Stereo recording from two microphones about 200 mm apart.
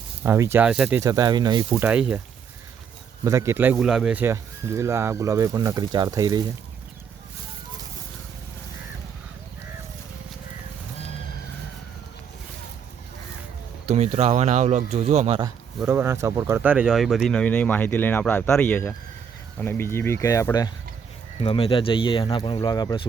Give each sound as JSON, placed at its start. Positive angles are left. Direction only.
{"t": 0.2, "sound": "speech", "side_deg": -10}
{"t": 1.8, "sound": "speech", "side_deg": -5}
{"t": 3.2, "sound": "speech", "side_deg": -15}
{"t": 13.8, "sound": "speech", "side_deg": -30}
{"t": 15.8, "sound": "speech", "side_deg": -10}